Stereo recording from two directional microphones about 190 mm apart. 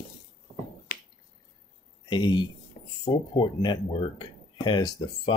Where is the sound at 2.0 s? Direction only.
25° left (ahead or behind).